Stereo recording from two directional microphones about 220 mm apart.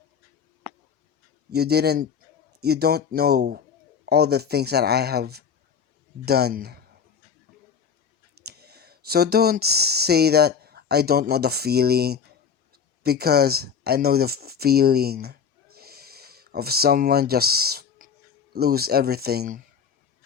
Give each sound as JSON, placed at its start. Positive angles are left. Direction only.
{"t": 1.5, "sound": "speech", "side_deg": -45}
{"t": 8.4, "sound": "speech", "side_deg": -45}